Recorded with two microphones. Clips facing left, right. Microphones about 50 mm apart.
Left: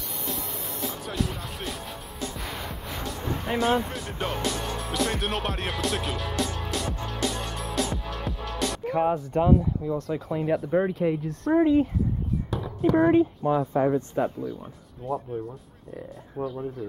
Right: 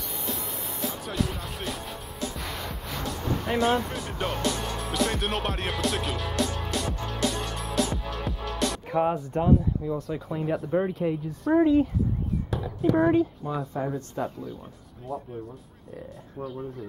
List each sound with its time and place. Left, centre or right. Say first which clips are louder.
0.2 s speech: left 1 dB; centre
13.1 s speech: left 4 dB; left
15.1 s speech: left 4 dB; centre